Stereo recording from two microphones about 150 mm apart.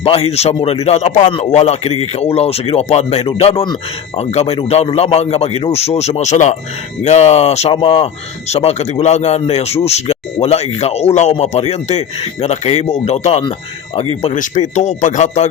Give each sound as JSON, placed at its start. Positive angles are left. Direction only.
{"t": 0.0, "sound": "a man's voice", "side_deg": 40}